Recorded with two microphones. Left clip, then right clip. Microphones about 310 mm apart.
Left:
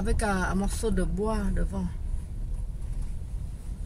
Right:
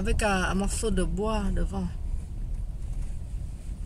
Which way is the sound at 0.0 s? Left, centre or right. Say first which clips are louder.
Right 2 dB; centre.